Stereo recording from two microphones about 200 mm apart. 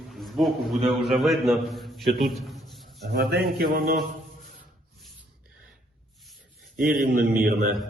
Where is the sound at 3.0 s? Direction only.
55° right (ahead or behind).